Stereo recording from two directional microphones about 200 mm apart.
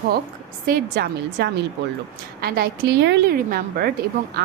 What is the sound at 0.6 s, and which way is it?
A woman's voice, 50° right (ahead or behind).